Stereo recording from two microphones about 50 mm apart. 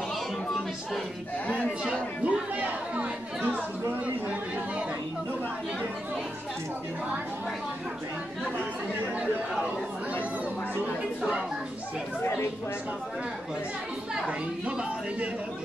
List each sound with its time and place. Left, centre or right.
1.9 s speech: right